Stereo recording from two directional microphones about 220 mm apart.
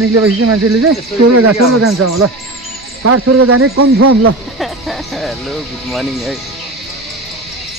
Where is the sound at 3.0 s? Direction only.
90° right.